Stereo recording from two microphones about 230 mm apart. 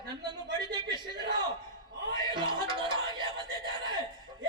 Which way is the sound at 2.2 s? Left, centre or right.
Centre.